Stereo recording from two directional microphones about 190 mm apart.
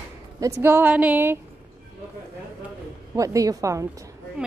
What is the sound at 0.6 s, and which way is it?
Speech, 10° right (ahead or behind).